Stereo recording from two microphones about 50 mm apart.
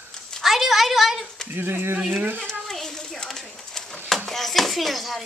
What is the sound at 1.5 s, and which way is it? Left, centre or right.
Speech, right.